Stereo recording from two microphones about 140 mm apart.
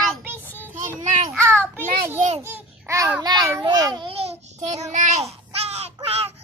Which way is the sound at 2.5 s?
15° right (ahead or behind).